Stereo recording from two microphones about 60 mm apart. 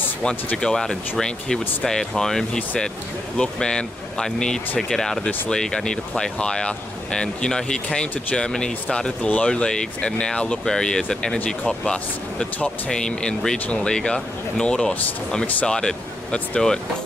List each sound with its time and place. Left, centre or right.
0.6 s speech: centre
12.5 s speech: left
12.9 s speech: centre